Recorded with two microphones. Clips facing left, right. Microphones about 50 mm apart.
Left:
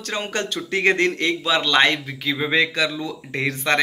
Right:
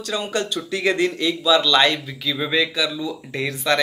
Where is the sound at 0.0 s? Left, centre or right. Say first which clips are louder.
Right 1 dB; left.